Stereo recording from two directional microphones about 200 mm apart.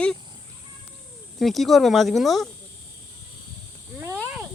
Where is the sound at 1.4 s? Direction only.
Centre (ahead or behind).